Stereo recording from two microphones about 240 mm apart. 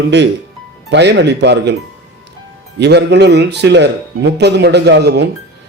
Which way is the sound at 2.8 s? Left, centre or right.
Right.